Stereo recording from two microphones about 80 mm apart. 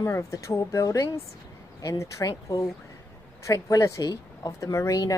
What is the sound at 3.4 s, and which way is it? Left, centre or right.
Speech, left.